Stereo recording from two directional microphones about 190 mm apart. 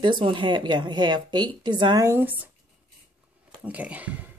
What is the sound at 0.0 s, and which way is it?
Speech, 25° right (ahead or behind).